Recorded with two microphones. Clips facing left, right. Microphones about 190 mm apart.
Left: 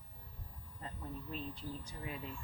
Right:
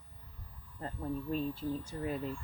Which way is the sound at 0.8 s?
45° right (ahead or behind).